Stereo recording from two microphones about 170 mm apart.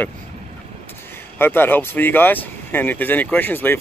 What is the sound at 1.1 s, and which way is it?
Speech, 15° left (ahead or behind).